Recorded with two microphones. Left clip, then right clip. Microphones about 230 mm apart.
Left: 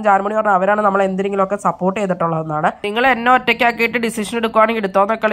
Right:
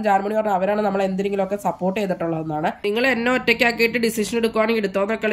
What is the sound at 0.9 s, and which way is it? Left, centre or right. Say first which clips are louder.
Speech: left 5 dB; centre.